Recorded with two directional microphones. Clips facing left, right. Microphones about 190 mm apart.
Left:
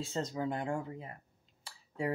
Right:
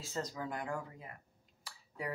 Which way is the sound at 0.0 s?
25° left (ahead or behind).